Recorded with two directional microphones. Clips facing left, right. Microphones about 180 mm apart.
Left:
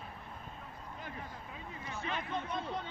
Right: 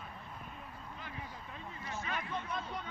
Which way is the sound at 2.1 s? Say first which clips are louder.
Left 3 dB; 25° left (ahead or behind).